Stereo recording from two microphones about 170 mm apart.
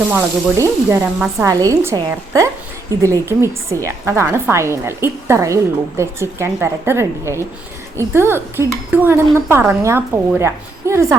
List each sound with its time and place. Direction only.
0.1 s speech: 15° right (ahead or behind)